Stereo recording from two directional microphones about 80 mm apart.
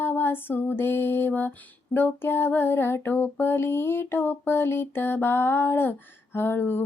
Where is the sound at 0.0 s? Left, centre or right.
Left.